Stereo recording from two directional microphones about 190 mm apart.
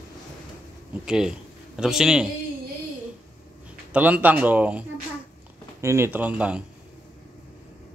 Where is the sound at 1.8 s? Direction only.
5° right (ahead or behind).